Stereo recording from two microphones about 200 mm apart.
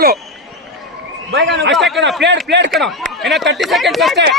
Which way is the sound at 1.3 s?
65° right (ahead or behind).